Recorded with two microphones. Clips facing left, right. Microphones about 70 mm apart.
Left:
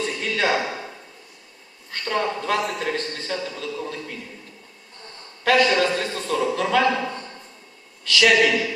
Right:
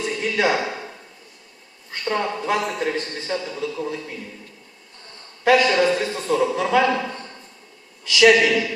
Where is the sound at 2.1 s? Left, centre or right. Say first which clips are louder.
Even; centre.